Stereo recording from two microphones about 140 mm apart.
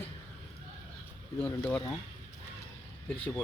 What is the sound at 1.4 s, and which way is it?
Speech, 15° left (ahead or behind).